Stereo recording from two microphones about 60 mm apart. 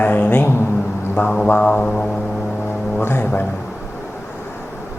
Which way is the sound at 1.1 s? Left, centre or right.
Left.